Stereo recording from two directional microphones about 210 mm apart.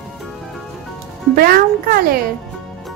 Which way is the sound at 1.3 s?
45° right (ahead or behind).